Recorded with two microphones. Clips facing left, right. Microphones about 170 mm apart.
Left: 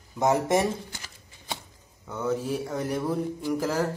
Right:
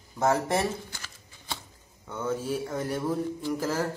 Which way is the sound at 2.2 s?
10° left (ahead or behind).